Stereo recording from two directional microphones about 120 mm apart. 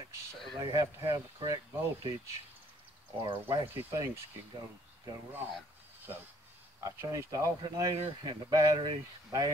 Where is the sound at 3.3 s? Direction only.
45° right (ahead or behind).